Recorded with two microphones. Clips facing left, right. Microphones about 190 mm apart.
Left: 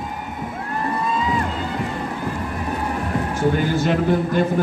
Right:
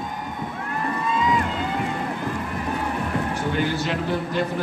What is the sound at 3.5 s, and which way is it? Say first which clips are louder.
Speech: left 4 dB; 45° left (ahead or behind).